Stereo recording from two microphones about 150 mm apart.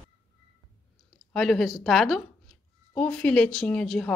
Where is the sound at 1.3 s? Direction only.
Centre (ahead or behind).